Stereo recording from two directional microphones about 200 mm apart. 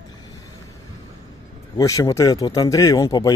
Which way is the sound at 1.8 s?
15° left (ahead or behind).